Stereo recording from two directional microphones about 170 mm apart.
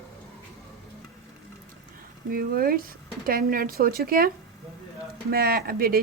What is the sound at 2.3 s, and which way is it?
Speech, 60° right (ahead or behind).